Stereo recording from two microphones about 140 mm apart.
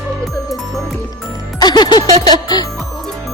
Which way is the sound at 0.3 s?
Centre (ahead or behind).